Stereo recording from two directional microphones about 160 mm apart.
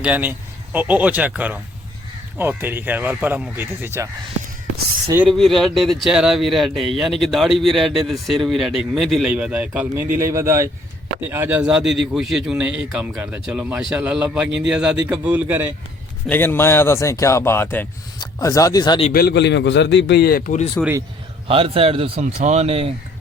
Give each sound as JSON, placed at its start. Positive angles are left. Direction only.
{"t": 0.0, "sound": "speech", "side_deg": -10}
{"t": 5.3, "sound": "a man's voice", "side_deg": 0}
{"t": 16.3, "sound": "speech", "side_deg": 10}
{"t": 19.1, "sound": "a man's voice", "side_deg": 80}
{"t": 20.8, "sound": "speech", "side_deg": 10}
{"t": 21.4, "sound": "speech", "side_deg": -35}